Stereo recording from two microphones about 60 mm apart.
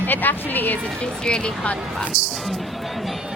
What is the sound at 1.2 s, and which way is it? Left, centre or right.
Speech, centre.